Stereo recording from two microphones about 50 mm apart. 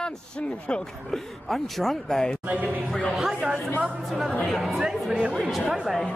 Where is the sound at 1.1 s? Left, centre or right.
Centre.